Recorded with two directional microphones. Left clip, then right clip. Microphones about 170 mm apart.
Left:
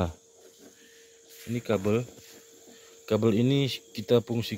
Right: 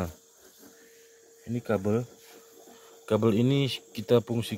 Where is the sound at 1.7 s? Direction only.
10° left (ahead or behind).